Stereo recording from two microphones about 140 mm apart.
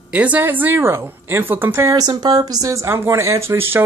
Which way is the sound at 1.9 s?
30° right (ahead or behind).